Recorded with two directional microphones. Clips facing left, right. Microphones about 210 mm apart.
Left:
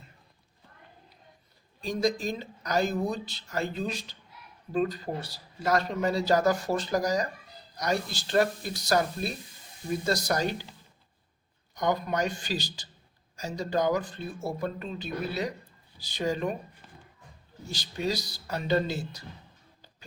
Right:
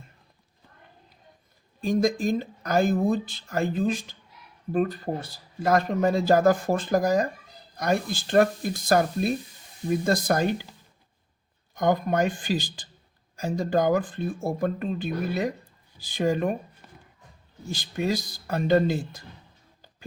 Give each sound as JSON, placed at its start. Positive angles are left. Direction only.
{"t": 1.8, "sound": "a man's voice", "side_deg": -50}
{"t": 11.7, "sound": "a man's voice", "side_deg": -50}
{"t": 17.7, "sound": "a man's voice", "side_deg": -50}